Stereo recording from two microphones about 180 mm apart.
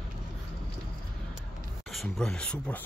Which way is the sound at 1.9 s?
Centre (ahead or behind).